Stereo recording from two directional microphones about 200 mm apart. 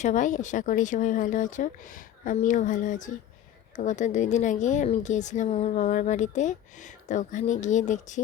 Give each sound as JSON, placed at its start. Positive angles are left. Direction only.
{"t": 0.0, "sound": "speech", "side_deg": 40}